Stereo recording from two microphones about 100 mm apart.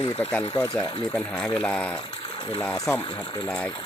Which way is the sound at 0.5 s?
40° left (ahead or behind).